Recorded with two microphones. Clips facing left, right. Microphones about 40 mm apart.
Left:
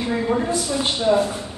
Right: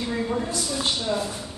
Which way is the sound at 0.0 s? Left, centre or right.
Left.